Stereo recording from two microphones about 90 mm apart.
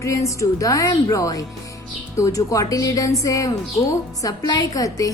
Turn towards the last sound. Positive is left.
turn(degrees=40)  # may be behind; listen again after turning